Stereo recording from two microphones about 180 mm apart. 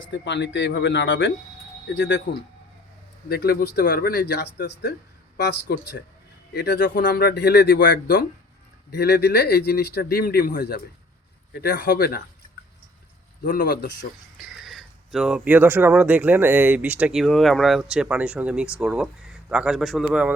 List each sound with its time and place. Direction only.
0.1 s speech: 80° left
2.0 s speech: 75° left (ahead or behind)
3.2 s speech: 60° left (ahead or behind)
13.4 s speech: 55° left (ahead or behind)
14.3 s speech: centre (ahead or behind)